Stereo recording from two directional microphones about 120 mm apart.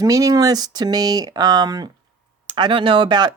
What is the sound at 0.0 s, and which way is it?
Speech, 30° right (ahead or behind).